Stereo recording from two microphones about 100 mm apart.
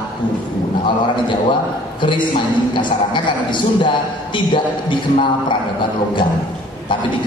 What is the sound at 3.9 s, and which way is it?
A man's voice, 50° left (ahead or behind).